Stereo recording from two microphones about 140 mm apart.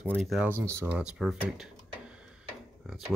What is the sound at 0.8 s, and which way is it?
Speech, 5° right (ahead or behind).